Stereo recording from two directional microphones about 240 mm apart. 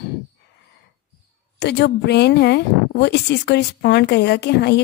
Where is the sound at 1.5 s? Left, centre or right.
Left.